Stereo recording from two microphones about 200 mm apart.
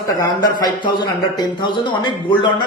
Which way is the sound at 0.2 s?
20° left (ahead or behind).